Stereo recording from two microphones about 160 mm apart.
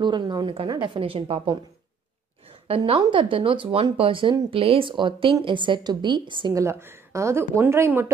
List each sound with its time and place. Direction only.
0.0 s a woman's voice: 30° right (ahead or behind)
2.7 s a woman's voice: 30° right (ahead or behind)
6.6 s speech: 15° right (ahead or behind)